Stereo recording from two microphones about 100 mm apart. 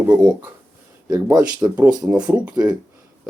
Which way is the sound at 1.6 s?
35° right (ahead or behind).